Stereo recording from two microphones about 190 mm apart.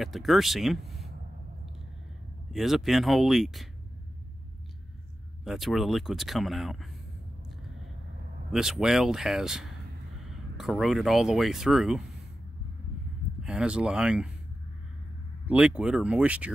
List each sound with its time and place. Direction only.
0.0 s speech: centre (ahead or behind)
2.5 s speech: centre (ahead or behind)
5.4 s speech: centre (ahead or behind)
8.5 s speech: centre (ahead or behind)
13.4 s speech: 5° right (ahead or behind)
15.4 s speech: 5° right (ahead or behind)